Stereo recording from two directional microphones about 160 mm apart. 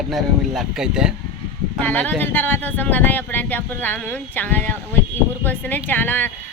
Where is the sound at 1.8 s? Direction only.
10° left (ahead or behind).